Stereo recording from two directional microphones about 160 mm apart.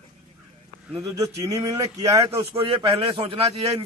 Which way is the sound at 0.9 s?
20° right (ahead or behind).